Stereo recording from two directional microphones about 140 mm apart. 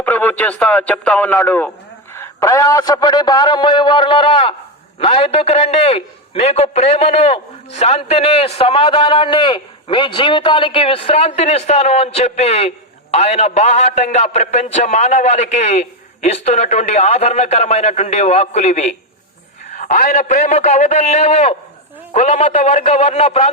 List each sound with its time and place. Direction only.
0.0 s a man's voice: 10° left (ahead or behind); by 23.5 s 50° left (ahead or behind)